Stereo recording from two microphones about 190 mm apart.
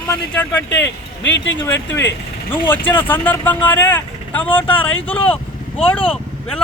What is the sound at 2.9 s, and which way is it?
A man's voice, 10° left (ahead or behind).